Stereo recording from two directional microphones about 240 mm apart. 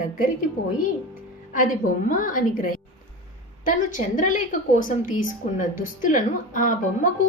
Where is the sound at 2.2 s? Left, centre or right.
Left.